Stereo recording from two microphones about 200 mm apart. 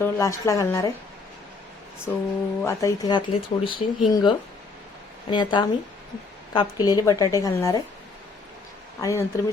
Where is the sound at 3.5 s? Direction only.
30° left (ahead or behind).